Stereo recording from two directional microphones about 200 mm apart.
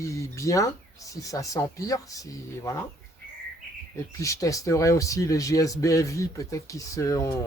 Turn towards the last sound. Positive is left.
turn(degrees=15)  # may be behind; listen again after turning